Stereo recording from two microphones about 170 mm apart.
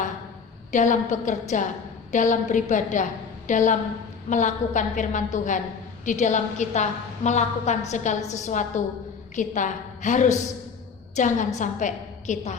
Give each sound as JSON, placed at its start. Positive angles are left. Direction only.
{"t": 0.7, "sound": "a woman's voice", "side_deg": 45}